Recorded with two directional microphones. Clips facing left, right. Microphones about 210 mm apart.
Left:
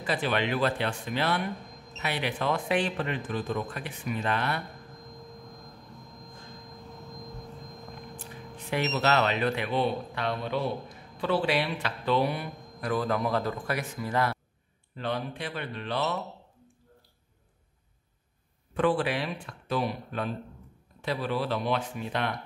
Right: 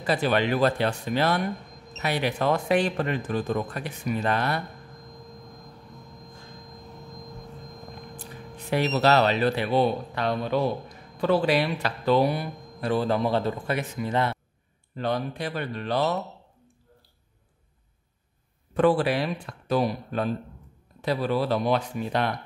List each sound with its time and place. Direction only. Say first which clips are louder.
0.0 s speech: right 5 dB; 40° right (ahead or behind)
8.2 s speech: right 2 dB; 40° right (ahead or behind); by 14.4 s 20° right (ahead or behind)
15.0 s speech: right 4 dB; 40° right (ahead or behind)
18.8 s speech: right 5 dB; 40° right (ahead or behind)